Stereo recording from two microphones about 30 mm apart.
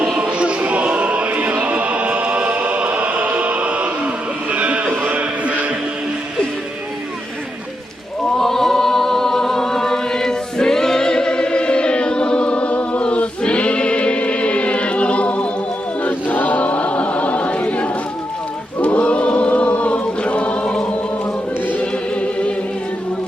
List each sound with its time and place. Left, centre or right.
0.2 s music: right
0.6 s a sound: right
1.3 s music: right
4.5 s a sound: right
8.4 s choir: centre; by 15.4 s left
16.0 s chant: left
16.6 s choir: left
19.5 s chant: left
22.1 s music: left